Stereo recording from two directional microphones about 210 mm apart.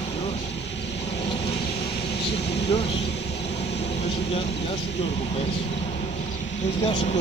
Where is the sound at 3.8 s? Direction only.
25° left (ahead or behind).